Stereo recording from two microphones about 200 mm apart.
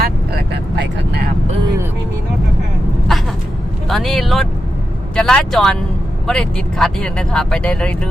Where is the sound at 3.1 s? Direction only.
Centre (ahead or behind).